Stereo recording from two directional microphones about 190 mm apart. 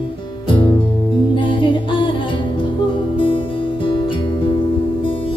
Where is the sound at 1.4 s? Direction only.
25° left (ahead or behind).